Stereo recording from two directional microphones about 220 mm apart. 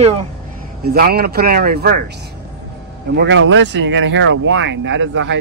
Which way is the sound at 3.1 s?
55° right (ahead or behind).